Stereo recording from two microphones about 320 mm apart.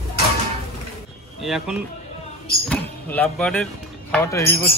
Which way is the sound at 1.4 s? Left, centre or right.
Centre.